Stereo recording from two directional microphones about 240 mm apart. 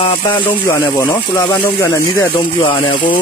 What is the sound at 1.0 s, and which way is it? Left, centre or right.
Speech, centre.